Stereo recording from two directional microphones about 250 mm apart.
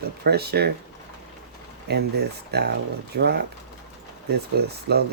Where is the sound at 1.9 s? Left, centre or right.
Right.